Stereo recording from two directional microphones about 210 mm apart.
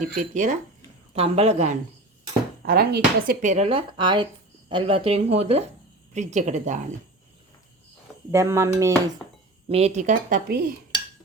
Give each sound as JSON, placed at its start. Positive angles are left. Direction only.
{"t": 0.0, "sound": "speech", "side_deg": -35}
{"t": 2.6, "sound": "speech", "side_deg": -50}
{"t": 8.3, "sound": "speech", "side_deg": -10}
{"t": 9.6, "sound": "speech", "side_deg": -30}